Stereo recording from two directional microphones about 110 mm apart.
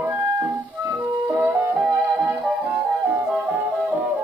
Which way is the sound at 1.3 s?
20° right (ahead or behind).